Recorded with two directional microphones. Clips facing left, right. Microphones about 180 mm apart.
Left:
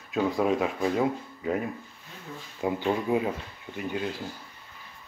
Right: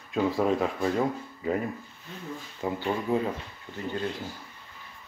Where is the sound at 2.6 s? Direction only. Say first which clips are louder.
Left 2 dB; 15° left (ahead or behind).